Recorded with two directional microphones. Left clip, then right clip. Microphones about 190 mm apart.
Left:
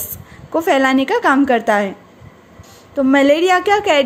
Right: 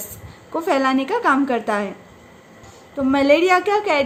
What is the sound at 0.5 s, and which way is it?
A woman's voice, 35° left (ahead or behind).